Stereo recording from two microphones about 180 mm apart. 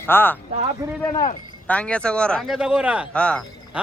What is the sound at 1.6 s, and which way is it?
Speech, 5° left (ahead or behind).